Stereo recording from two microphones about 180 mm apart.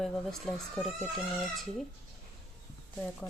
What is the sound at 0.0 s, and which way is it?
Speech, centre (ahead or behind).